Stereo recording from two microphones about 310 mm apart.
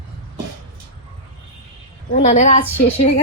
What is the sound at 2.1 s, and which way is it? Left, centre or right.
Speech, left.